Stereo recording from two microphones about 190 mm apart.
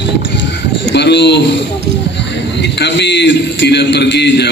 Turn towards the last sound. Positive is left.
turn(degrees=65)  # may be behind; listen again after turning